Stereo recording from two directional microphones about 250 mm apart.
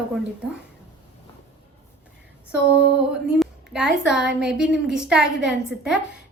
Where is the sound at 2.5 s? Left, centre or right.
Centre.